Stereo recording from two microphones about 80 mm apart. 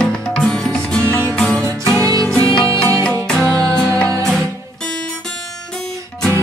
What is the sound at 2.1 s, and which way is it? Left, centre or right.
Music, right.